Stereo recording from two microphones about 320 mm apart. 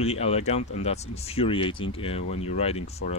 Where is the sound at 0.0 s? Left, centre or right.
Centre.